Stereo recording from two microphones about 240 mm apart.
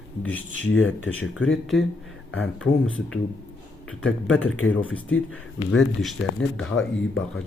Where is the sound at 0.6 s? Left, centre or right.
Left.